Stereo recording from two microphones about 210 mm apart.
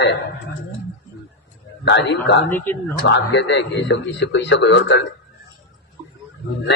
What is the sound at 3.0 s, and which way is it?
A man's voice, 60° left (ahead or behind).